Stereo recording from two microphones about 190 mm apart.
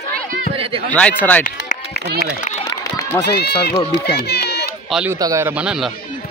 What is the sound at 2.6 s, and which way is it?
Run, 15° left (ahead or behind).